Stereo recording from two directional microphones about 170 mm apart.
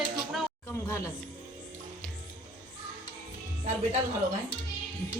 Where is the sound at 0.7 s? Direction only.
15° left (ahead or behind).